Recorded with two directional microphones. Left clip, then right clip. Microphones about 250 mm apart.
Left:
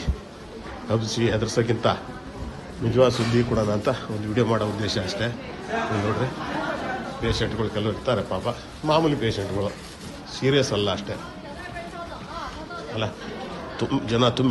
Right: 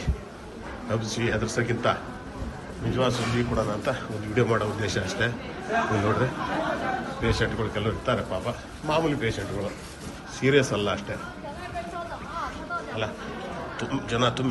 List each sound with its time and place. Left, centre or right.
0.9 s a man's voice: centre
4.4 s speech: centre
5.7 s speech: centre
10.4 s speech: centre
13.7 s a man's voice: centre